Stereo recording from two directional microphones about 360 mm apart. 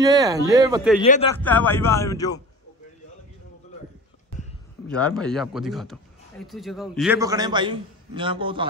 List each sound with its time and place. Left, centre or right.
0.0 s speech: centre
1.0 s speech: left
1.4 s speech: centre
4.8 s a man's voice: centre